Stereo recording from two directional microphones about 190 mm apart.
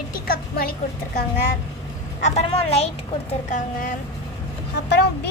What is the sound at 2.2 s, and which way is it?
Speech, 30° left (ahead or behind).